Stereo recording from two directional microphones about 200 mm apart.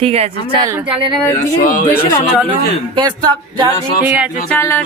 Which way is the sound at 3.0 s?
20° right (ahead or behind).